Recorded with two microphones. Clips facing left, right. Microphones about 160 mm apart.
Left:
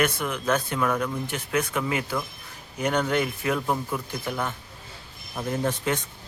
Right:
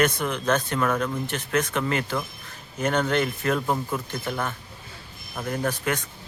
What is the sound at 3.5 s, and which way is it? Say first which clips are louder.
Speech: even; 15° right (ahead or behind).